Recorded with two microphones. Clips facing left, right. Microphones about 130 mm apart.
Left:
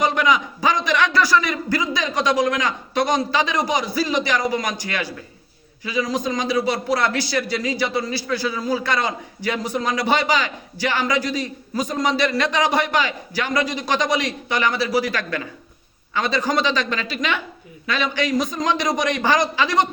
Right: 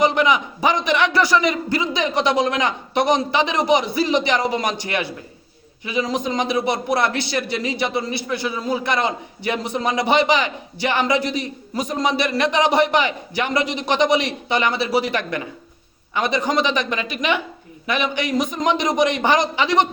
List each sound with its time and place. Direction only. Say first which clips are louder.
0.0 s a man's voice: right 2 dB; 20° right (ahead or behind)